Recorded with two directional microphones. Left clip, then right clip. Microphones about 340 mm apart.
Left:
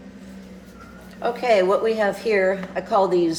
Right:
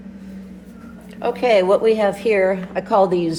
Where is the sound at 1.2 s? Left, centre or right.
Centre.